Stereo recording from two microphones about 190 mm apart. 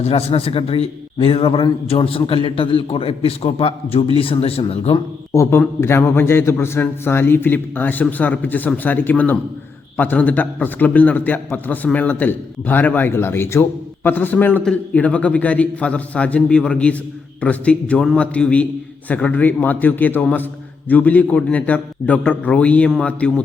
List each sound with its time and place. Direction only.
0.0 s a man's voice: 30° left (ahead or behind)
5.3 s a man's voice: 15° left (ahead or behind)